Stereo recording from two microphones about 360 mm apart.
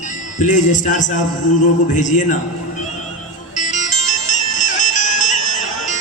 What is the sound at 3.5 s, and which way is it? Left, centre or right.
Bagpipes, centre.